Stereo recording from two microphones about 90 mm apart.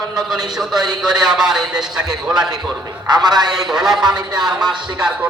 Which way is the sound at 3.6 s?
5° right (ahead or behind).